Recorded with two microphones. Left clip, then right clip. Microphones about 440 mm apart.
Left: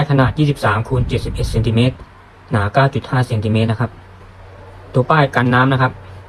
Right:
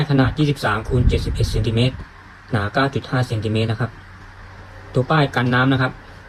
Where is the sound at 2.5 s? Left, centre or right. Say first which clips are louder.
Left 4 dB; centre.